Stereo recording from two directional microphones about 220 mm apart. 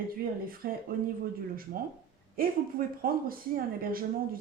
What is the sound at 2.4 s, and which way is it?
Speech, 40° right (ahead or behind).